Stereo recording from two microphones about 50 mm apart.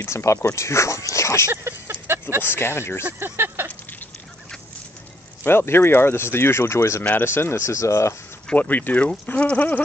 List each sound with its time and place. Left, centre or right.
0.0 s speech: left
1.5 s a sound: right
2.4 s speech: left
3.2 s speech: right
5.4 s speech: left
7.6 s speech: left
8.5 s speech: left